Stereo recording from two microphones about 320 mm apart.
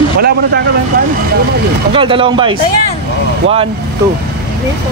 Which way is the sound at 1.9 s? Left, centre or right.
Centre.